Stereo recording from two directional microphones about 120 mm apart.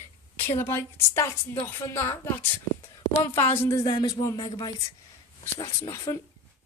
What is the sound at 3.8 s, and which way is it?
A woman's voice, 35° left (ahead or behind).